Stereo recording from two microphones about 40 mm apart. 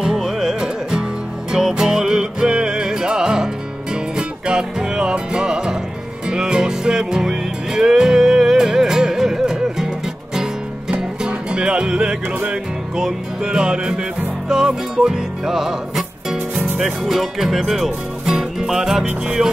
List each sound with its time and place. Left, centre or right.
0.0 s music: centre
16.8 s speech: centre
19.2 s music: centre